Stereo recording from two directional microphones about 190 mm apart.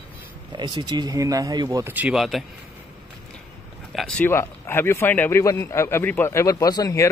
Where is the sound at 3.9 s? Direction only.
Centre (ahead or behind).